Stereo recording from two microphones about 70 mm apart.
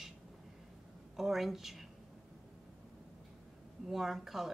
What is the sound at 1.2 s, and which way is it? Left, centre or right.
Speech, centre.